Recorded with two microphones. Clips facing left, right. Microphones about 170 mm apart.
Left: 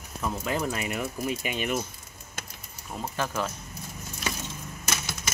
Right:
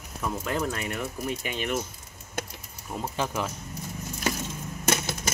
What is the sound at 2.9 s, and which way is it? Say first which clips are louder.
Speech: right 1 dB; 10° right (ahead or behind).